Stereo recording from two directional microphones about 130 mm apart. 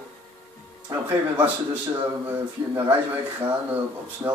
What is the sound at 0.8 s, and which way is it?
Speech, 15° right (ahead or behind).